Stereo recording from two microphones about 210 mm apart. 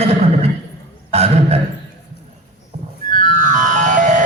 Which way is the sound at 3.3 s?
35° right (ahead or behind).